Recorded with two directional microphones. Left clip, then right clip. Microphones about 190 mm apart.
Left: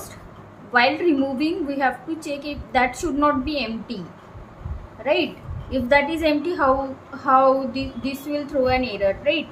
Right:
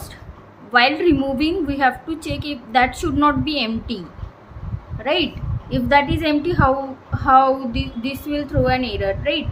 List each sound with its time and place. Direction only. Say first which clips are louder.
0.7 s speech: right 3 dB; 25° right (ahead or behind)
5.0 s speech: right 1 dB; 30° right (ahead or behind)